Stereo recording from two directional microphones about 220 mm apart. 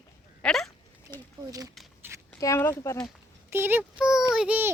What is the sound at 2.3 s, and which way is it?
Speech, 10° left (ahead or behind).